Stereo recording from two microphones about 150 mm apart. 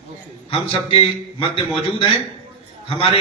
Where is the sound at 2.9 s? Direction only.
35° left (ahead or behind).